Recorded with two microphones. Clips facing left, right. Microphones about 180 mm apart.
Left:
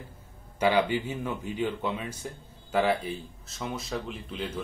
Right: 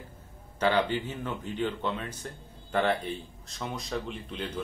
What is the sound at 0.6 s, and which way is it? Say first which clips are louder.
Speech: left 2 dB; 10° left (ahead or behind).